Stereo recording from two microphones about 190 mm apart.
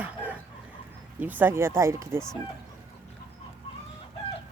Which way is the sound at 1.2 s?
10° right (ahead or behind).